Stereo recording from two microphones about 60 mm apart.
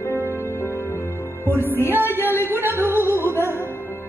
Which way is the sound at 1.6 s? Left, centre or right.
Left.